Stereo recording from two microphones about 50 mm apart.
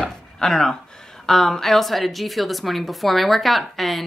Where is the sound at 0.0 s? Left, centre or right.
Centre.